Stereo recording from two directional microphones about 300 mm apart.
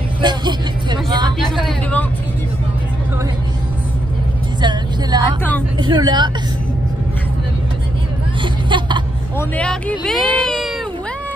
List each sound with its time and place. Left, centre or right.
0.2 s music: centre
1.4 s a sound: centre
4.6 s vehicle: centre
5.8 s speech: centre
8.4 s hubbub: centre
9.4 s speech: centre